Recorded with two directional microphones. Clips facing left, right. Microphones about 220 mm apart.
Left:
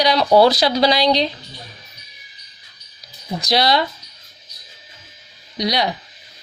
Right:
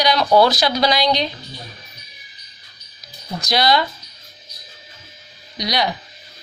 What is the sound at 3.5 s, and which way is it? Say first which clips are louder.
Speech: even; 30° left (ahead or behind).